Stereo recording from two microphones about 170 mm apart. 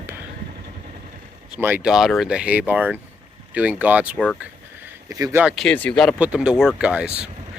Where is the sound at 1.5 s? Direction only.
10° right (ahead or behind).